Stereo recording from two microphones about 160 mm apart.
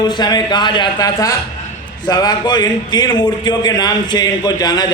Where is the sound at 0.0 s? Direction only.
25° left (ahead or behind).